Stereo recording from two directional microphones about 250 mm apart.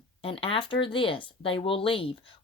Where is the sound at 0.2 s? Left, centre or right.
Left.